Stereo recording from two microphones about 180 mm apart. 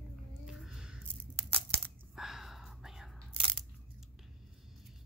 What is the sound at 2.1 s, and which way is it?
Whispering, centre (ahead or behind).